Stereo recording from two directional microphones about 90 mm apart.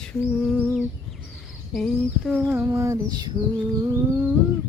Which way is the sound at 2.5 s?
30° right (ahead or behind).